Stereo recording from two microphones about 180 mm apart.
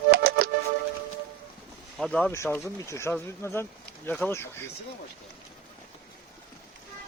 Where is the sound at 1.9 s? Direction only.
5° left (ahead or behind).